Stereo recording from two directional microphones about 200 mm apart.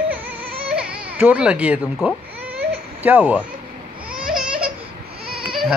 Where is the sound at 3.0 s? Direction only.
10° right (ahead or behind).